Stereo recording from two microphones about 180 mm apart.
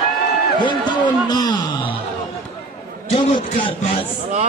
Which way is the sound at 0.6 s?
25° left (ahead or behind).